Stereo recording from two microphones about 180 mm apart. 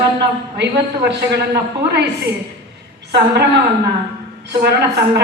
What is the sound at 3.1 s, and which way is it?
Speech, 65° right (ahead or behind).